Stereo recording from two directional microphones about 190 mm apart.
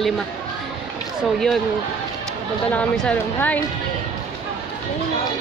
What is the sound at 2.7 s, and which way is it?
Speech, 5° left (ahead or behind).